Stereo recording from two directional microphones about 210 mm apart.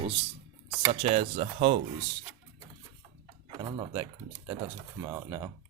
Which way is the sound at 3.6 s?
20° right (ahead or behind).